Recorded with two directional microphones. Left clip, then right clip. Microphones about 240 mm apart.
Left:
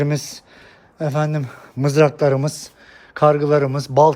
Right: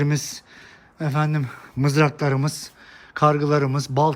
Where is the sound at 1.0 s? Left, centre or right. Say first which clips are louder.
Left 4 dB; right.